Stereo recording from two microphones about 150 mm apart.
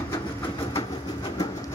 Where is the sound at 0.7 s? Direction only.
30° left (ahead or behind).